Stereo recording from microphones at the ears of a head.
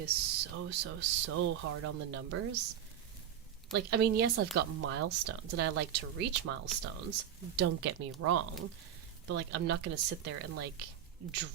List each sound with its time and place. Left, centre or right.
0.0 s speech: right